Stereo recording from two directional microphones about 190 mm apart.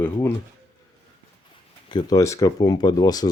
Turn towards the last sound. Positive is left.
turn(degrees=20)  # may be behind; listen again after turning